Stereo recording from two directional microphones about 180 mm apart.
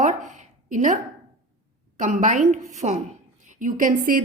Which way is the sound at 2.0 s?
45° right (ahead or behind).